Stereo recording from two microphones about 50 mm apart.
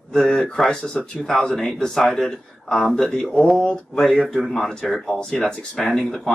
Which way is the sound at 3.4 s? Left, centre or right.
Centre.